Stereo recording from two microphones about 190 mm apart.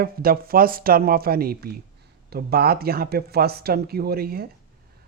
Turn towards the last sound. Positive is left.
turn(degrees=-55)  # may be behind; listen again after turning